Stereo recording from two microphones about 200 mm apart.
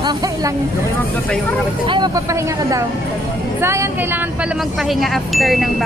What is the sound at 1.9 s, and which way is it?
Speech, 20° right (ahead or behind).